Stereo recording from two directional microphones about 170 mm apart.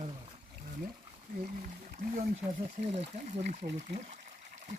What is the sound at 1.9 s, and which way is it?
Speech, 50° right (ahead or behind).